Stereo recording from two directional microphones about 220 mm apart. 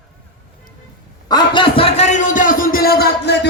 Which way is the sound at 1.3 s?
20° left (ahead or behind).